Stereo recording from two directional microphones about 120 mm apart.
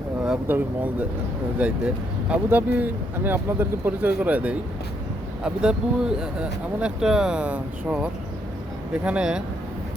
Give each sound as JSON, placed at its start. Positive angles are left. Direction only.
{"t": 0.3, "sound": "speech", "side_deg": -15}